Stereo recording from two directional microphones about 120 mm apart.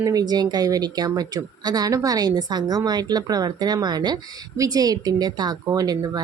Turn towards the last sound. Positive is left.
turn(degrees=-35)  # may be behind; listen again after turning